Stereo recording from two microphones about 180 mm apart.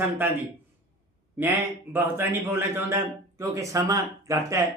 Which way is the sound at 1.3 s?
10° right (ahead or behind).